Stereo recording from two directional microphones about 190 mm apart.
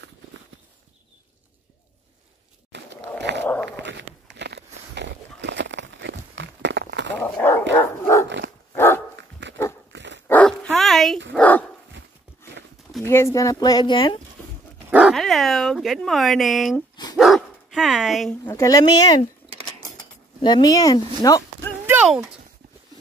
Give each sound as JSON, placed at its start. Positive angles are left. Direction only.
{"t": 2.7, "sound": "a sound", "side_deg": -70}
{"t": 3.2, "sound": "dog", "side_deg": -65}
{"t": 3.7, "sound": "a sound", "side_deg": -70}
{"t": 7.2, "sound": "dog", "side_deg": 10}
{"t": 9.4, "sound": "dog", "side_deg": -70}
{"t": 10.2, "sound": "dog", "side_deg": 5}
{"t": 13.0, "sound": "speech", "side_deg": 15}
{"t": 14.9, "sound": "speech", "side_deg": -5}
{"t": 16.9, "sound": "dog", "side_deg": 20}
{"t": 17.2, "sound": "speech", "side_deg": 0}
{"t": 18.4, "sound": "speech", "side_deg": 15}
{"t": 20.4, "sound": "speech", "side_deg": 20}
{"t": 21.8, "sound": "a sound", "side_deg": -5}